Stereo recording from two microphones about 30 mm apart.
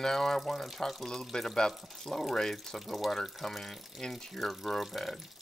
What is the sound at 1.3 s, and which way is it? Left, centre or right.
Speech, centre.